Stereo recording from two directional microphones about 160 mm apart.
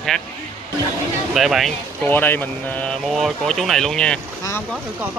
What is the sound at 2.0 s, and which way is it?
Speech, 10° left (ahead or behind).